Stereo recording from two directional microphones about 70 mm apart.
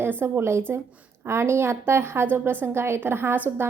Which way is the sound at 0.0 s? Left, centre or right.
Right.